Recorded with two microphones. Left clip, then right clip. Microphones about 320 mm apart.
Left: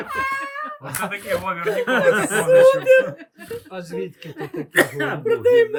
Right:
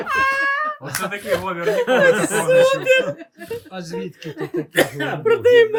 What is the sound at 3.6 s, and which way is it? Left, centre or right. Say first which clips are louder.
Speech: even; left.